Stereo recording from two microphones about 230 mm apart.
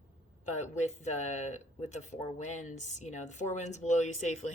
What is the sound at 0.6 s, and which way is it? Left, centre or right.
Speech, left.